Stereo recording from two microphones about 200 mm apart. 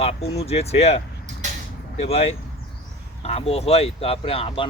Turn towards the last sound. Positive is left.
turn(degrees=30)  # may be behind; listen again after turning